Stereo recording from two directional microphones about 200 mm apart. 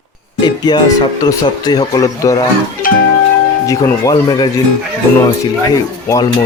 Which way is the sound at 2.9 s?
45° left (ahead or behind).